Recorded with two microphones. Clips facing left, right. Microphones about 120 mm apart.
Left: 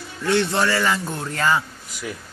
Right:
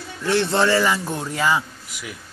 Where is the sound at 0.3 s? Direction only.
25° right (ahead or behind).